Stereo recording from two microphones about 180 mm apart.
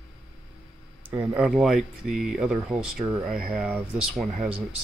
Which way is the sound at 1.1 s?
15° right (ahead or behind).